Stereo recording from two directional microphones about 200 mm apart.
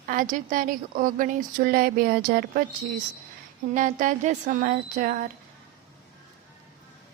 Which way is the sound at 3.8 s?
40° right (ahead or behind).